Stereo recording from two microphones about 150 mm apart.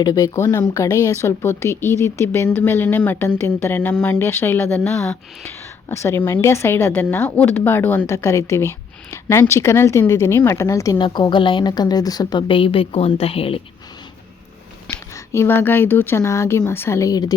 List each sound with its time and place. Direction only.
0.0 s speech: 25° left (ahead or behind)
10.9 s a woman's voice: 30° left (ahead or behind)
14.8 s speech: 20° left (ahead or behind)